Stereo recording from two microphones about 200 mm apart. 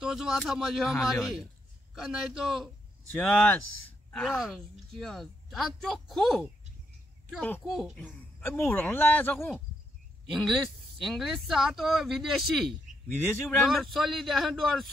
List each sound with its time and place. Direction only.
0.0 s a man's voice: centre (ahead or behind)
8.0 s speech: 10° left (ahead or behind)